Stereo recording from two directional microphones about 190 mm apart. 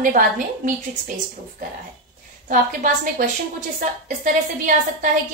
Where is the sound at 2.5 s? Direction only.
45° right (ahead or behind).